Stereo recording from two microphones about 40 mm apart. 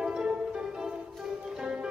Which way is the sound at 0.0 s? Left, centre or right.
Centre.